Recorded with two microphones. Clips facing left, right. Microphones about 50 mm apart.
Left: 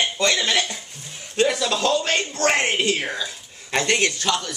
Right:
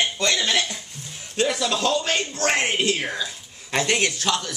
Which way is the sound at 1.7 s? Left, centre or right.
Centre.